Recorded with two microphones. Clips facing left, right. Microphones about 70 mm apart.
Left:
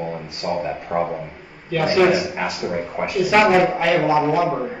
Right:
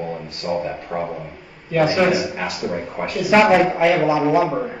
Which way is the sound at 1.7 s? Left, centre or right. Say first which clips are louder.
Right 3 dB; centre.